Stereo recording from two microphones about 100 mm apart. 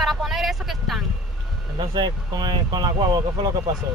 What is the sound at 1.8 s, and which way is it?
Speech, 50° right (ahead or behind).